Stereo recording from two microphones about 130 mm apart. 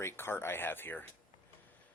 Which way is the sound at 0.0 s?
20° left (ahead or behind).